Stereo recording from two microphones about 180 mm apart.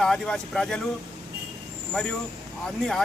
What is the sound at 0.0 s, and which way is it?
Speech, 5° left (ahead or behind).